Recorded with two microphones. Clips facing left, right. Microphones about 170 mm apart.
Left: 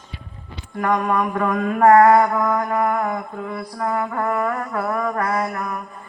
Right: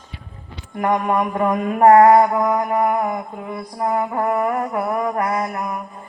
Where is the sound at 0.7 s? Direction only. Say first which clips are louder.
Right 1 dB; 25° right (ahead or behind).